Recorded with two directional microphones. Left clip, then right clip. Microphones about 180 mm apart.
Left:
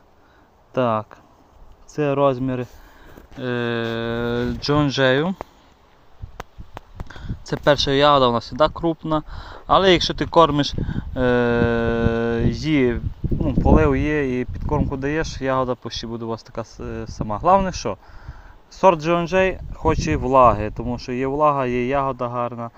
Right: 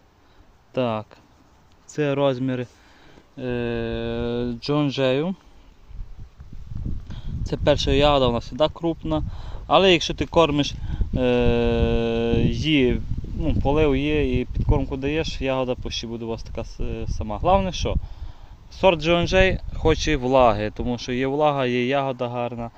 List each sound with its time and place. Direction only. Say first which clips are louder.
0.7 s speech: left 4 dB; centre (ahead or behind)
7.1 s speech: left 3 dB; centre (ahead or behind)
21.2 s a man's voice: left 3 dB; 30° right (ahead or behind)
22.0 s speech: left 2 dB; 15° right (ahead or behind)